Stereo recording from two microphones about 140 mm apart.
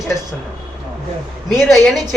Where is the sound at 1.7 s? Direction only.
Centre (ahead or behind).